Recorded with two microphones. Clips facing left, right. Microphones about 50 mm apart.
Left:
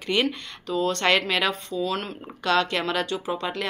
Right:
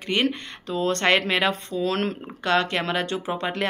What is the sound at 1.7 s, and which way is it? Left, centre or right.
Speech, right.